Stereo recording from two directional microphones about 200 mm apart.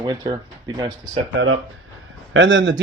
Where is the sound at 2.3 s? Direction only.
70° right (ahead or behind).